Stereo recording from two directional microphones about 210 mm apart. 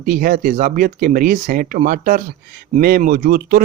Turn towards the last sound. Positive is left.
turn(degrees=-45)  # may be behind; listen again after turning